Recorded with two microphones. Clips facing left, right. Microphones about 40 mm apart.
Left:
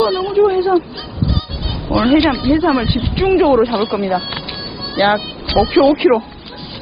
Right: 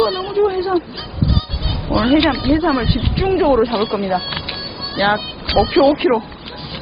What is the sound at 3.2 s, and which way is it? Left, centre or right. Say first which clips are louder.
Speech: left 3 dB; left.